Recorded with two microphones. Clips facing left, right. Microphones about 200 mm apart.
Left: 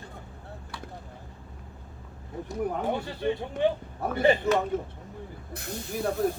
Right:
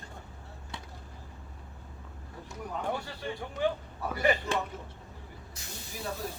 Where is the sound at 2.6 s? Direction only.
55° left (ahead or behind).